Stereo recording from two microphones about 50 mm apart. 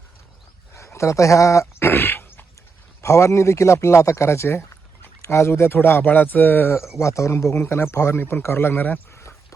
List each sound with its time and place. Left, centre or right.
0.9 s speech: left
1.9 s a sound: left
3.0 s speech: left
6.7 s speech: left
7.0 s speech: left
7.6 s speech: left
9.1 s a sound: left